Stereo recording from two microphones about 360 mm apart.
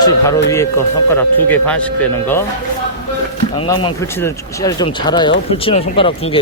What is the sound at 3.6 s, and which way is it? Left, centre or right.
Speech, centre.